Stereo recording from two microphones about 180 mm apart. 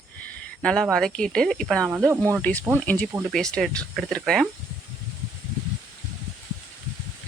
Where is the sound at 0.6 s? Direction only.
5° left (ahead or behind).